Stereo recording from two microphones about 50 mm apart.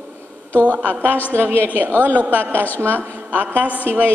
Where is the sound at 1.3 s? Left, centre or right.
Right.